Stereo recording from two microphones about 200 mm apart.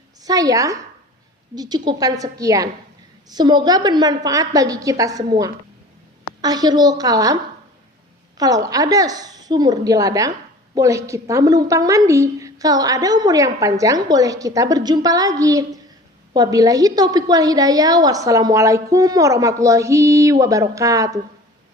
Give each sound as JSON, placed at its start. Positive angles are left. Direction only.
{"t": 0.2, "sound": "a woman's voice", "side_deg": -20}
{"t": 8.4, "sound": "a woman's voice", "side_deg": -20}